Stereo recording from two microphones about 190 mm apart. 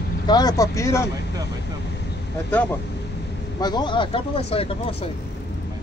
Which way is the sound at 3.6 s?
20° left (ahead or behind).